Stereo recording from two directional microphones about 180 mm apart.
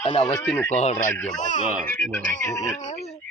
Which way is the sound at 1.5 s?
50° right (ahead or behind).